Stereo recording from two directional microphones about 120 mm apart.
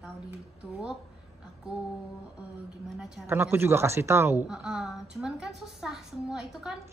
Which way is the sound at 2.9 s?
5° right (ahead or behind).